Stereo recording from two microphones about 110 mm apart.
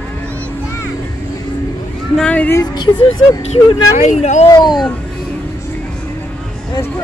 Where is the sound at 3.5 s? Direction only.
85° left.